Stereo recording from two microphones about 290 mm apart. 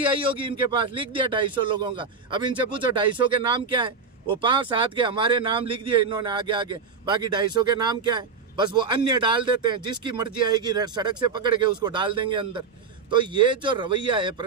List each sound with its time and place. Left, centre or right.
0.2 s speech: centre